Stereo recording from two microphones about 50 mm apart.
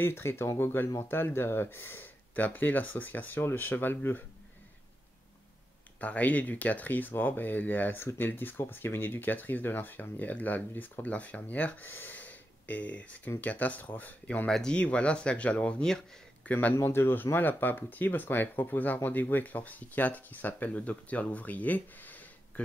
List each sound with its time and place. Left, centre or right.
0.0 s speech: left
2.3 s speech: left
5.9 s speech: left
11.8 s speech: left
16.8 s speech: left